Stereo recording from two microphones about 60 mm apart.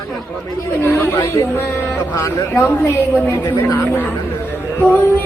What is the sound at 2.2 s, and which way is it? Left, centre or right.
Speech, left.